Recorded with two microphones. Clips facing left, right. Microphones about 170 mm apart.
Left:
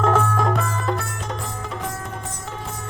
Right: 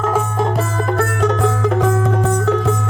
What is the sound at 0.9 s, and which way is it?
Music, 55° right (ahead or behind).